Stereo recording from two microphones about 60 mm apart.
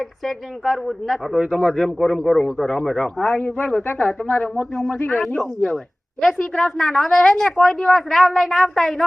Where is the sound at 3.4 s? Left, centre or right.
Left.